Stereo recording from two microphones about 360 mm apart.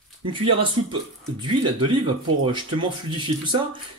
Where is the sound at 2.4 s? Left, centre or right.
Centre.